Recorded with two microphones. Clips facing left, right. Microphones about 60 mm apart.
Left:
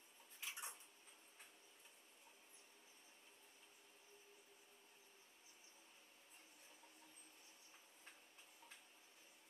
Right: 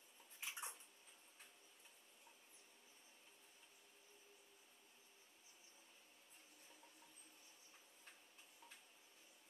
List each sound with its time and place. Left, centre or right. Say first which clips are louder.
0.4 s bathtub: right 1 dB; right